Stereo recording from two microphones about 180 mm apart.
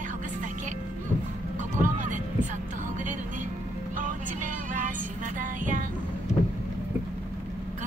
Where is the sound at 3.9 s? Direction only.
45° right (ahead or behind).